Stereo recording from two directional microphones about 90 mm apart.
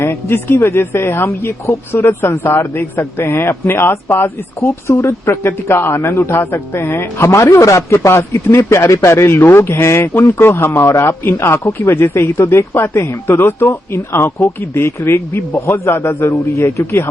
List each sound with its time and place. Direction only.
0.0 s speech: 25° left (ahead or behind)